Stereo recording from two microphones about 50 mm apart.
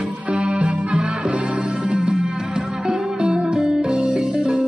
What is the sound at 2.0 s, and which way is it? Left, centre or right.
Music, centre.